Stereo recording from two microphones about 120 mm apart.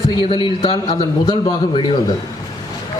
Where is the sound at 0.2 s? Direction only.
40° left (ahead or behind).